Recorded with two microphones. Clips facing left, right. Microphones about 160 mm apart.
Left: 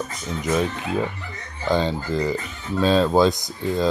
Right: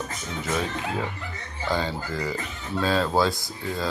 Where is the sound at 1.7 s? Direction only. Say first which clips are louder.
Left 6 dB; 20° left (ahead or behind).